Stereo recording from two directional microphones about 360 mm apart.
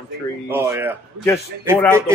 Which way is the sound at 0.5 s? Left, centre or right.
Centre.